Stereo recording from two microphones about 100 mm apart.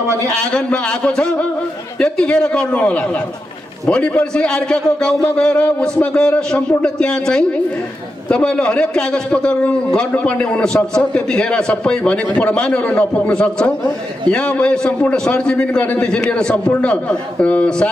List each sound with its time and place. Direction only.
0.0 s a man's voice: 30° right (ahead or behind)
0.4 s a man's voice: 10° left (ahead or behind)